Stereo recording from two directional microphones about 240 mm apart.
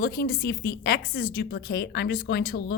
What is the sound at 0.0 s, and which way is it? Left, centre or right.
A woman's voice, left.